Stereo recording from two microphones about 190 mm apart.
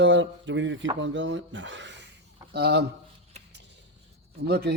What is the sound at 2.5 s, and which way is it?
Speech, 55° right (ahead or behind).